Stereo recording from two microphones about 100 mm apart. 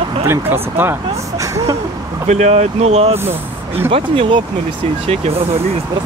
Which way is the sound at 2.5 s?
90° right.